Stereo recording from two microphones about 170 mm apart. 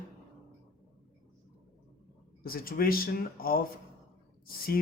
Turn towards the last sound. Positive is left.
turn(degrees=60)  # may be behind; listen again after turning